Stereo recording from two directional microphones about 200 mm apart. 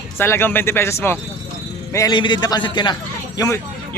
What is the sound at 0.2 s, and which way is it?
A man's voice, 10° left (ahead or behind).